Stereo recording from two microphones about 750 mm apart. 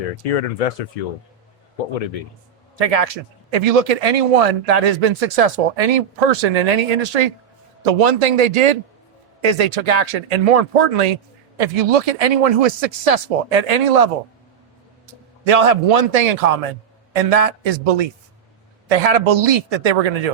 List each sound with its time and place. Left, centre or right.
0.2 s speech: left
2.7 s speech: right
15.4 s speech: right